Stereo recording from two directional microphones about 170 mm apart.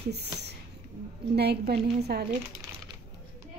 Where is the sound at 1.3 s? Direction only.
75° right (ahead or behind).